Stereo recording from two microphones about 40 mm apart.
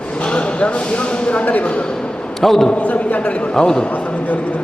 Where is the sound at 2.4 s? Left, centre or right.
Centre.